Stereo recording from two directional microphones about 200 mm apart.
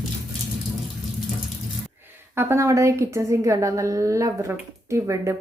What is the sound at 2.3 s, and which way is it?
A woman's voice, 15° right (ahead or behind).